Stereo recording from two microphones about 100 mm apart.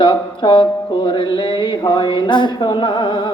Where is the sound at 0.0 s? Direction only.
55° left (ahead or behind).